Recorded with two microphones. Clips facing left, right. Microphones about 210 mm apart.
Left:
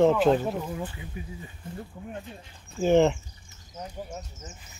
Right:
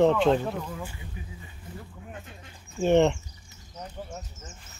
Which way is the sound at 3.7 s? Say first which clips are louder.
Left 2 dB; centre (ahead or behind).